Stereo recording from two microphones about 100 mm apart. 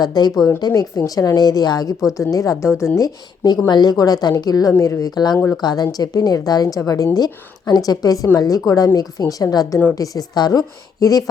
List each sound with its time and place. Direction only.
0.0 s a woman's voice: 40° left (ahead or behind)
2.9 s a woman's voice: 40° left (ahead or behind)